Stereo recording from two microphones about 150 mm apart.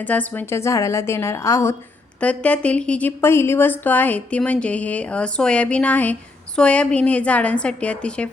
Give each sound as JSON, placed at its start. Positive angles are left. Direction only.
{"t": 0.0, "sound": "a woman's voice", "side_deg": 10}
{"t": 2.2, "sound": "a woman's voice", "side_deg": 10}